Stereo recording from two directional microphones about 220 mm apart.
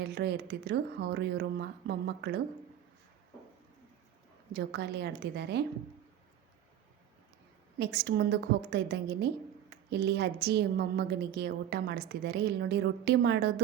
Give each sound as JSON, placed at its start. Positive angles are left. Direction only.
{"t": 0.0, "sound": "a woman's voice", "side_deg": -50}
{"t": 4.5, "sound": "a woman's voice", "side_deg": -50}
{"t": 7.8, "sound": "a woman's voice", "side_deg": -50}